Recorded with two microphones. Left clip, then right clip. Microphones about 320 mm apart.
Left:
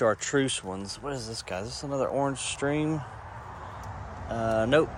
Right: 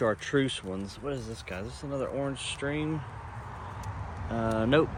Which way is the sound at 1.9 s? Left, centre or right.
Centre.